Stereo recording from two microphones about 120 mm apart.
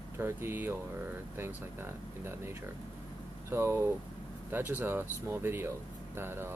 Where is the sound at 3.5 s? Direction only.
20° right (ahead or behind).